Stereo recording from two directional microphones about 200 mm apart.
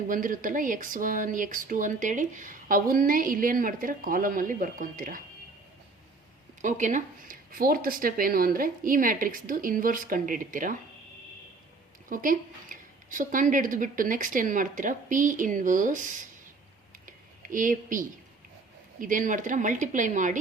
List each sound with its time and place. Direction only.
0.1 s speech: 45° right (ahead or behind)
6.6 s speech: 40° right (ahead or behind)
12.0 s speech: 40° right (ahead or behind)
17.1 s a sound: 40° right (ahead or behind)
18.9 s speech: 40° right (ahead or behind)